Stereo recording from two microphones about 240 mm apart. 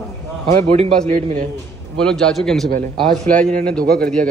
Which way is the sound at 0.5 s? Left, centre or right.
Right.